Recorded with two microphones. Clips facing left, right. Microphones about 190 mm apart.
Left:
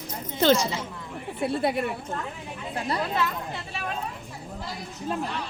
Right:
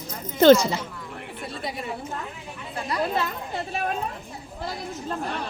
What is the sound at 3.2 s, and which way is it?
Speech, 45° right (ahead or behind).